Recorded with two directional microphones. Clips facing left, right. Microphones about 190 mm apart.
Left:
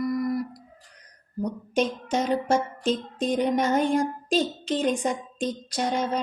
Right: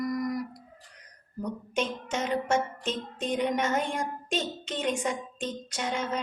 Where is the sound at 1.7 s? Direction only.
35° left (ahead or behind).